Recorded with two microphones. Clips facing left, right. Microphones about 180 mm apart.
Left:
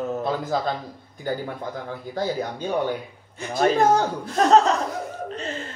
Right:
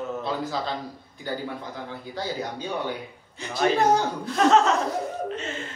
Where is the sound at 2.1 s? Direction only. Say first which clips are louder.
Left 5 dB; 50° left (ahead or behind).